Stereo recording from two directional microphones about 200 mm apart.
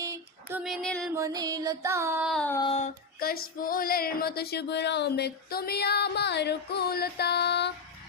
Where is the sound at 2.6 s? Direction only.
30° left (ahead or behind).